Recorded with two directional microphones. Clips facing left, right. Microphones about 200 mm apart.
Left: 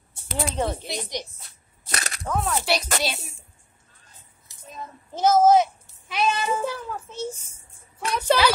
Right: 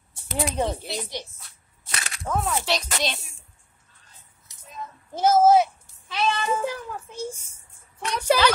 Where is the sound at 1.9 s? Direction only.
40° left (ahead or behind).